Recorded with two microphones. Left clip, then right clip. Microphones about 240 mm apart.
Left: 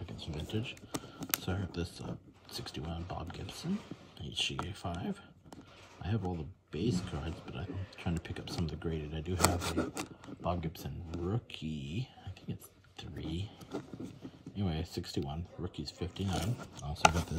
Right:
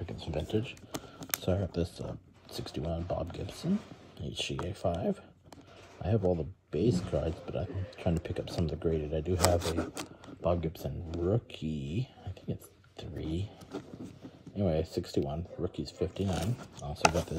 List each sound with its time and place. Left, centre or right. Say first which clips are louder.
0.0 s speech: right 7 dB; centre